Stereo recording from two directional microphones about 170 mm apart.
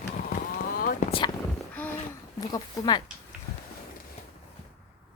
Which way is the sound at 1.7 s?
10° left (ahead or behind).